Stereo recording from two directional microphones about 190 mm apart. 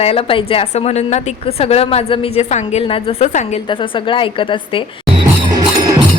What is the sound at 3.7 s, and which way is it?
A woman's voice, 25° left (ahead or behind).